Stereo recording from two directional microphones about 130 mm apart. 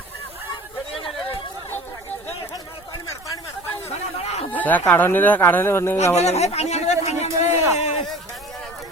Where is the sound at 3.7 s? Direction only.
50° left (ahead or behind).